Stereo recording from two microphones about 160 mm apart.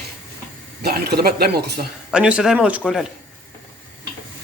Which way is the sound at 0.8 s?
80° right.